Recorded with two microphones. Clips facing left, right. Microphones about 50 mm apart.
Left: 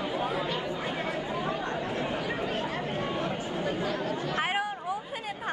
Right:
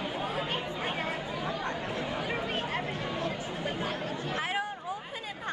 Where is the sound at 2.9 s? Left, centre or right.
Left.